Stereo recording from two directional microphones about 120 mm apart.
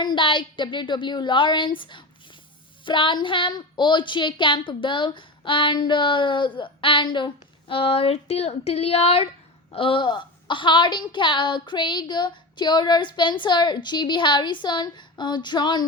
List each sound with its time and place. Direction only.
0.0 s a woman's voice: 40° left (ahead or behind)